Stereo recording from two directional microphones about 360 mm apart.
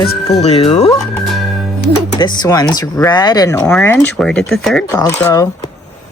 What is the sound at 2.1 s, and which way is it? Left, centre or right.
Speech, centre.